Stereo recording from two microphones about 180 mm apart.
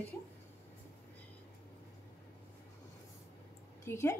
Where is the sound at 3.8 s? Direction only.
15° left (ahead or behind).